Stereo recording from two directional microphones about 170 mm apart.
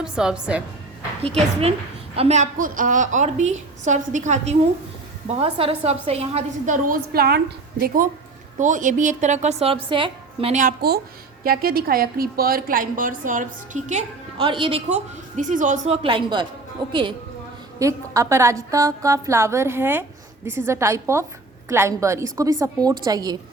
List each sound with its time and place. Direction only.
0.0 s a woman's voice: 5° right (ahead or behind)
2.1 s a woman's voice: 40° right (ahead or behind)
5.3 s speech: 35° right (ahead or behind)
6.8 s a woman's voice: 60° right (ahead or behind); by 10.5 s 30° right (ahead or behind)
10.5 s a woman's voice: 55° right (ahead or behind)
14.3 s speech: 30° right (ahead or behind); by 16.0 s 45° right (ahead or behind)
16.0 s a woman's voice: 30° right (ahead or behind)
17.7 s a woman's voice: 20° right (ahead or behind)